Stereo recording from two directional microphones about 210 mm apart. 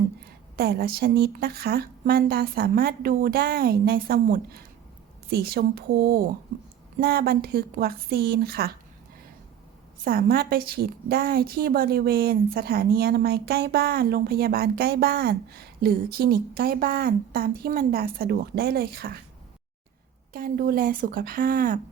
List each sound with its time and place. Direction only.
0.5 s a woman's voice: 45° right (ahead or behind)
10.0 s a woman's voice: 45° right (ahead or behind)
20.3 s a woman's voice: 45° right (ahead or behind)